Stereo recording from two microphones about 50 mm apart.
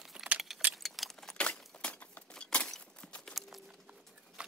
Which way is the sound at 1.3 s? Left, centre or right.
Left.